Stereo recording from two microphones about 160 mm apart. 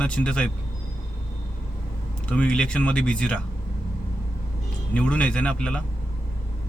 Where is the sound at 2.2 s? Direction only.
5° left (ahead or behind).